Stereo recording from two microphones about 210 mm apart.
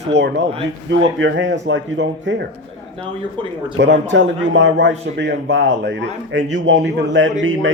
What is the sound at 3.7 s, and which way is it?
A man's voice, 60° right (ahead or behind).